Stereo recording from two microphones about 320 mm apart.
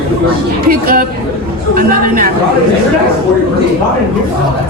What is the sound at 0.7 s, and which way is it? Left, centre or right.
A woman's voice, right.